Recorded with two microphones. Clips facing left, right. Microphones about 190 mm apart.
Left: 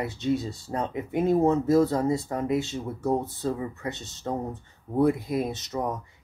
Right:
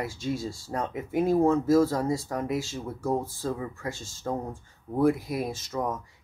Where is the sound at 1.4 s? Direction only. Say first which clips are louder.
Left 1 dB; 20° left (ahead or behind).